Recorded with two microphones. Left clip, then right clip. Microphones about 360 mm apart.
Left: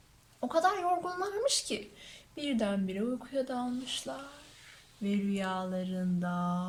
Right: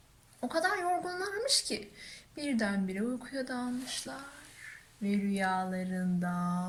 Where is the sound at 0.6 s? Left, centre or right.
Centre.